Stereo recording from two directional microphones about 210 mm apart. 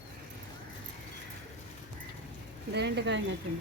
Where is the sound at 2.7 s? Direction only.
55° right (ahead or behind).